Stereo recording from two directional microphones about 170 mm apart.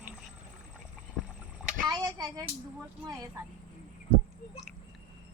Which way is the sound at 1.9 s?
20° right (ahead or behind).